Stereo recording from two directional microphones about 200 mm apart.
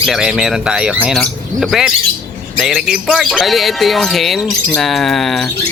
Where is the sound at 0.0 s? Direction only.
Centre (ahead or behind).